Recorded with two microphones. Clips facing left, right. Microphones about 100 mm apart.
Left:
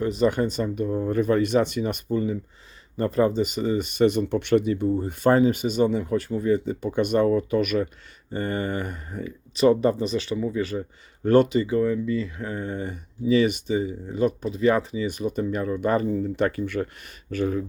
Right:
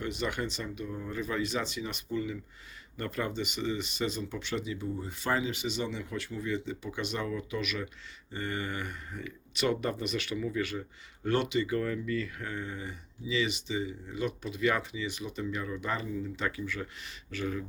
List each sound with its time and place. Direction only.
0.0 s speech: 35° left (ahead or behind)
11.7 s speech: 20° left (ahead or behind)
12.6 s speech: 50° left (ahead or behind)